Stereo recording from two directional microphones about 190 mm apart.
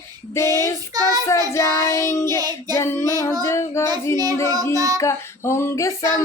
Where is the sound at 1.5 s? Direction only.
15° left (ahead or behind).